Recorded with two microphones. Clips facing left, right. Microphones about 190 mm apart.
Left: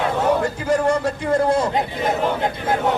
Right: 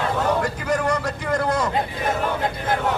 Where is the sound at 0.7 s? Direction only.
30° left (ahead or behind).